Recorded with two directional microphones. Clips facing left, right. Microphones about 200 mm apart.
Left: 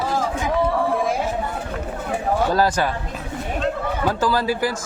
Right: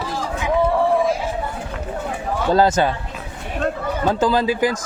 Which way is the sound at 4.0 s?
20° right (ahead or behind).